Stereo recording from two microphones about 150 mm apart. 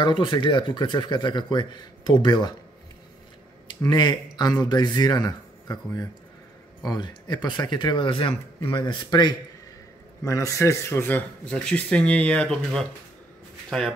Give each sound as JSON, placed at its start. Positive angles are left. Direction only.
{"t": 0.0, "sound": "speech", "side_deg": 30}
{"t": 3.8, "sound": "speech", "side_deg": 30}